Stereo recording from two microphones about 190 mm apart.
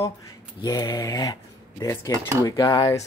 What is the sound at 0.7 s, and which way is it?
Speech, 20° left (ahead or behind).